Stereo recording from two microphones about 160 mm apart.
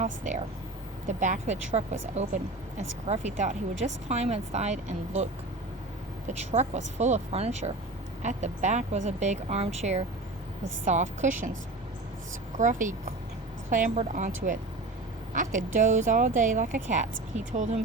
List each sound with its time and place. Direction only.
0.0 s speech: 50° right (ahead or behind)
6.5 s speech: 45° right (ahead or behind)
12.5 s speech: 50° right (ahead or behind)